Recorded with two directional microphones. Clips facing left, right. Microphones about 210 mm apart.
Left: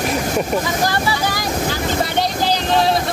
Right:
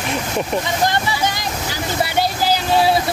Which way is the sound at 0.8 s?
20° right (ahead or behind).